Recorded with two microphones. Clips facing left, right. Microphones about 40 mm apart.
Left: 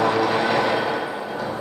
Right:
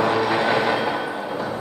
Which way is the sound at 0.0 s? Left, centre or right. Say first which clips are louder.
Even; centre.